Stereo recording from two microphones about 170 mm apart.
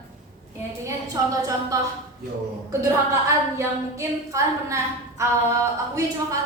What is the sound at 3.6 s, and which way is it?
A woman's voice, 20° right (ahead or behind).